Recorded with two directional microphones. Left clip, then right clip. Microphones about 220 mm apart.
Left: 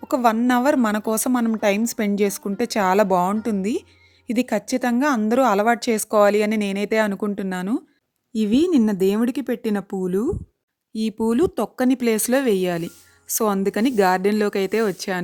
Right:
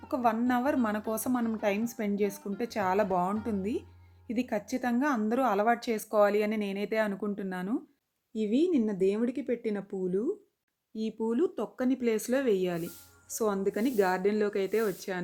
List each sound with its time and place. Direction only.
0.1 s a woman's voice: 45° left (ahead or behind)